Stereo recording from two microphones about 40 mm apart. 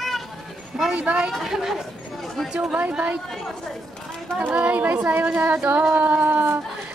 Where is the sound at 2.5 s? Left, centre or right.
Centre.